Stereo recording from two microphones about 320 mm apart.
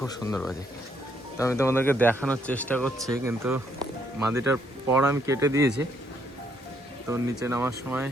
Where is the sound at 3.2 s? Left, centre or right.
Centre.